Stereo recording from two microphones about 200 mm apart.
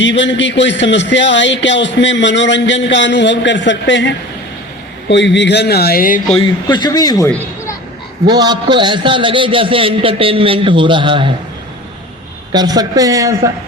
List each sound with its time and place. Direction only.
0.0 s a man's voice: 65° left (ahead or behind); by 6.2 s 45° left (ahead or behind)
6.7 s speech: 20° left (ahead or behind)
7.3 s a sound: 15° left (ahead or behind)
8.3 s a man's voice: 20° right (ahead or behind)
12.5 s a man's voice: 20° right (ahead or behind)